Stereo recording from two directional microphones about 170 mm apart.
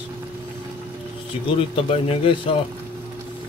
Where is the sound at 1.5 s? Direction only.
35° left (ahead or behind).